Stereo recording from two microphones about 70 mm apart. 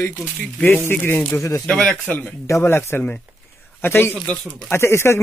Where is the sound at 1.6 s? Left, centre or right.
Centre.